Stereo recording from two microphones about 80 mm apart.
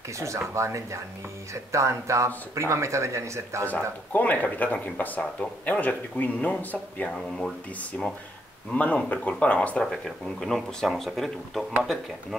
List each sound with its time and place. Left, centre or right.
0.2 s speech: right
4.1 s speech: centre
8.7 s speech: centre